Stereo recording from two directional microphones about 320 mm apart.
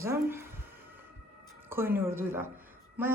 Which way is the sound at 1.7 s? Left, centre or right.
Centre.